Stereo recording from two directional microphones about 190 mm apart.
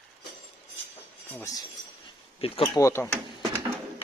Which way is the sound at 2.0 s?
25° left (ahead or behind).